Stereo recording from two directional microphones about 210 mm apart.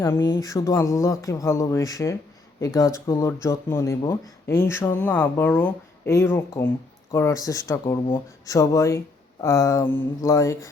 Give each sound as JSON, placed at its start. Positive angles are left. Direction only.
{"t": 0.0, "sound": "speech", "side_deg": 15}